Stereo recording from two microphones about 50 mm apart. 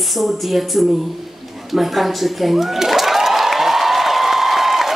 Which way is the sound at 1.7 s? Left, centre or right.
Centre.